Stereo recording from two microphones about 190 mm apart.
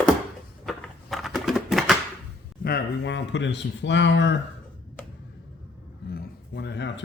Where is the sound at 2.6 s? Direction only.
60° left (ahead or behind).